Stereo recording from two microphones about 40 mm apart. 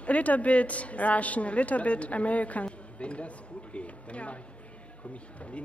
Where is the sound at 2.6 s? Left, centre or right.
Left.